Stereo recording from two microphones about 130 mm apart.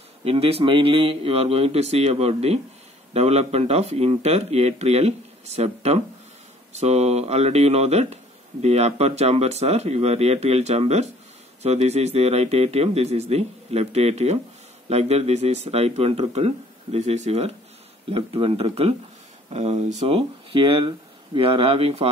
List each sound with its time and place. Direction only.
0.2 s speech: 50° right (ahead or behind)
18.1 s speech: 45° right (ahead or behind)
20.2 s speech: 45° right (ahead or behind)